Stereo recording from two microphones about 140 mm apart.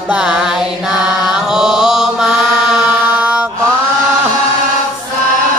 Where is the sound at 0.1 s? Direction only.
5° right (ahead or behind).